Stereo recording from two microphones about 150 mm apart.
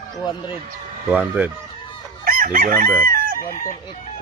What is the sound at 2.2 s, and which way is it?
Chicken, 70° right (ahead or behind).